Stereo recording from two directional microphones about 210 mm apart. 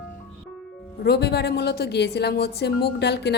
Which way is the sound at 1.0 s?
50° left (ahead or behind).